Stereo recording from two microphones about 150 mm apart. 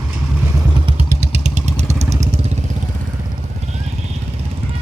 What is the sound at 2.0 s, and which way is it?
Vehicle, 20° right (ahead or behind).